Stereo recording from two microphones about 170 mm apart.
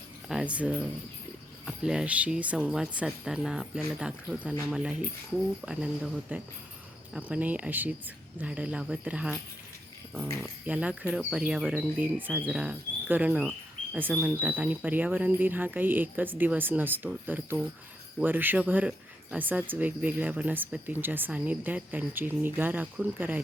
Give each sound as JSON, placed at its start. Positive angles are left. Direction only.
{"t": 0.3, "sound": "speech", "side_deg": -5}